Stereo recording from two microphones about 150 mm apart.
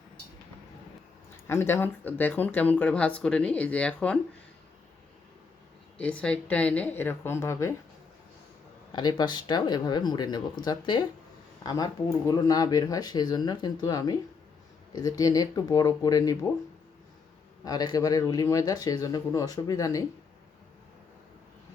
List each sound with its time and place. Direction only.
1.5 s speech: 15° left (ahead or behind)
6.0 s speech: 10° left (ahead or behind)
8.9 s speech: 30° left (ahead or behind)
17.7 s speech: 25° left (ahead or behind)